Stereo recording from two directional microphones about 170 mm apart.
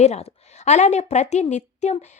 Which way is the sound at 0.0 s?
40° left (ahead or behind).